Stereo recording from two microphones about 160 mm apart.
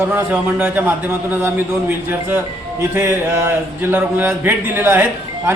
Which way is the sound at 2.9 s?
15° right (ahead or behind).